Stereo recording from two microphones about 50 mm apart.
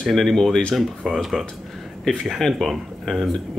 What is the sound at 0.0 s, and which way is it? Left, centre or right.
Speech, centre.